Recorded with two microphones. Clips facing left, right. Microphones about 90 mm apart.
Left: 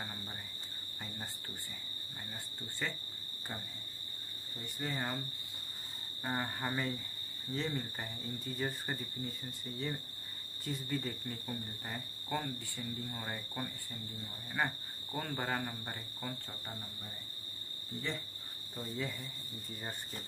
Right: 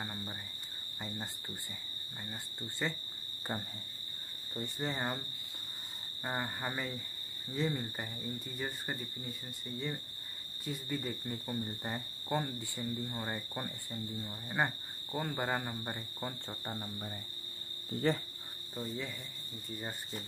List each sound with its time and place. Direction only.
0.0 s cricket: 10° right (ahead or behind)
2.8 s cricket: 20° right (ahead or behind)
4.6 s speech: 25° right (ahead or behind)
6.2 s speech: 10° right (ahead or behind)
10.6 s speech: centre (ahead or behind)
11.2 s cricket: 20° right (ahead or behind)
14.1 s speech: 20° right (ahead or behind)
15.1 s cricket: 15° right (ahead or behind)
15.8 s speech: 20° right (ahead or behind)
18.0 s speech: 45° right (ahead or behind)
18.8 s speech: centre (ahead or behind)